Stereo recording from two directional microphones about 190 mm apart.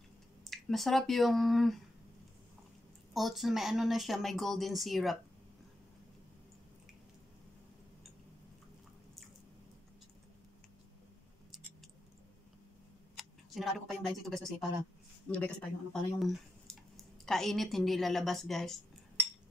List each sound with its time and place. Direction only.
0.4 s speech: centre (ahead or behind)
3.1 s speech: centre (ahead or behind)
13.1 s speech: centre (ahead or behind)